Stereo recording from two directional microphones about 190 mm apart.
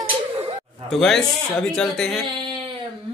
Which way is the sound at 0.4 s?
30° right (ahead or behind).